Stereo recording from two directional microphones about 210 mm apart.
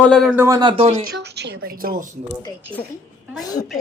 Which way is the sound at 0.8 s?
45° right (ahead or behind).